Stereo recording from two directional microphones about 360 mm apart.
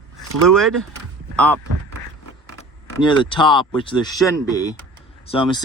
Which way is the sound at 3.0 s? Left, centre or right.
Centre.